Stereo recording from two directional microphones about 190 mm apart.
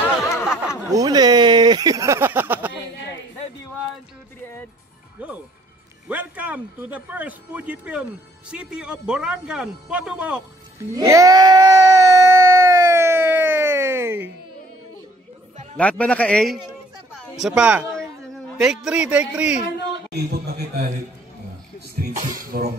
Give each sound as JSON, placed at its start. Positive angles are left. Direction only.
{"t": 0.8, "sound": "a sound", "side_deg": -20}
{"t": 6.0, "sound": "speech", "side_deg": -10}
{"t": 10.9, "sound": "screaming", "side_deg": -15}
{"t": 15.8, "sound": "a man's voice", "side_deg": 5}
{"t": 20.2, "sound": "speech", "side_deg": -55}
{"t": 22.4, "sound": "cough", "side_deg": -50}